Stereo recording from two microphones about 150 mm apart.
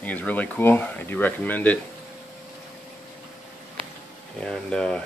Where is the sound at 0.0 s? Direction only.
10° left (ahead or behind).